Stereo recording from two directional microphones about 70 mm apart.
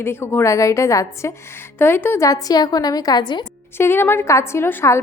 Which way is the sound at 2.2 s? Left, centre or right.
Left.